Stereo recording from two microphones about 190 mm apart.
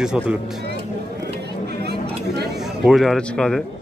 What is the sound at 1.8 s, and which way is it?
Chatter, 60° right (ahead or behind).